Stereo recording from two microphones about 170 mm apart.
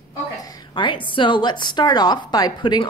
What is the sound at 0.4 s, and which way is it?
A woman's voice, 20° left (ahead or behind).